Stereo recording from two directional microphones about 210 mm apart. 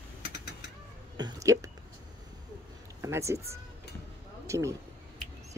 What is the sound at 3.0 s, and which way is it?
Speech, 15° right (ahead or behind).